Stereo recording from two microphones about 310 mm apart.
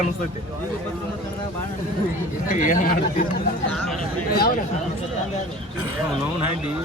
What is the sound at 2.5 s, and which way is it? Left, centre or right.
Speech, left.